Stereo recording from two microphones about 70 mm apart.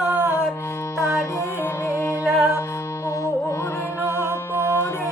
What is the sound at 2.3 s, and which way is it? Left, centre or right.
Music, centre.